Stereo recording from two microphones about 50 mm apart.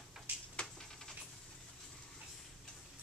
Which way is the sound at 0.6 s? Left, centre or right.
Left.